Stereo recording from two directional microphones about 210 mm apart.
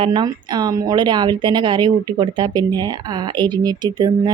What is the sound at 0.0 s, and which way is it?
Speech, 20° right (ahead or behind).